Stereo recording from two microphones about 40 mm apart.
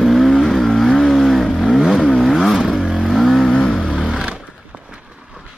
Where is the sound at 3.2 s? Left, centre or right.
Centre.